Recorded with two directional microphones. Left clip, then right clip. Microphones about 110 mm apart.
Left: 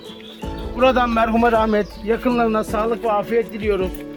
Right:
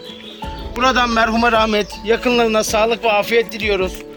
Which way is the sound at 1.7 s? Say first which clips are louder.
Right 3 dB; 55° left (ahead or behind).